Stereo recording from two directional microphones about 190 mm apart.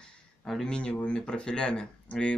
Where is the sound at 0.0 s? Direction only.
5° left (ahead or behind).